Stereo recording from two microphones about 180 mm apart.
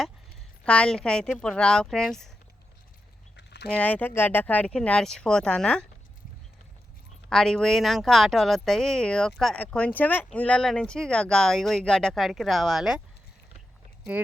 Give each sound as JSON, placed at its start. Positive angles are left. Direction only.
{"t": 0.6, "sound": "speech", "side_deg": 5}
{"t": 3.3, "sound": "a sound", "side_deg": 70}
{"t": 3.7, "sound": "speech", "side_deg": 5}
{"t": 7.3, "sound": "speech", "side_deg": 5}